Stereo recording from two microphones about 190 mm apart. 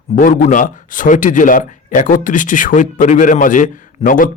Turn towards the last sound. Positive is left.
turn(degrees=45)  # may be behind; listen again after turning